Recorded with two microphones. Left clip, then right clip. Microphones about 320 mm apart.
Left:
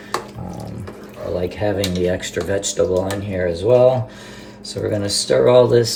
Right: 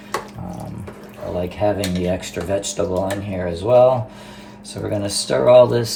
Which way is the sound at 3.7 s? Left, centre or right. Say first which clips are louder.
Right 1 dB; centre.